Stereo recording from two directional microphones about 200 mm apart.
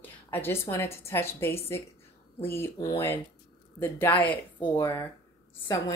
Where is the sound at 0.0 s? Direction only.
10° left (ahead or behind).